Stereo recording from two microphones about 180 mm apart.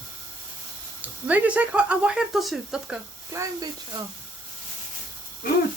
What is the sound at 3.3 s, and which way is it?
Speech, 20° right (ahead or behind).